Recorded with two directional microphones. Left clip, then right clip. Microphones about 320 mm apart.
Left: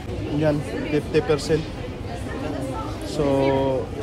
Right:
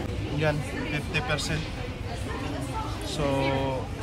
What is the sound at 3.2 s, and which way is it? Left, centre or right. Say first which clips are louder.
Speech: left 6 dB; right.